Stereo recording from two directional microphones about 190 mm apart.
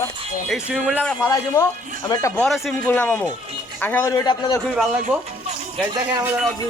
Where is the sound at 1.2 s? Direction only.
15° left (ahead or behind).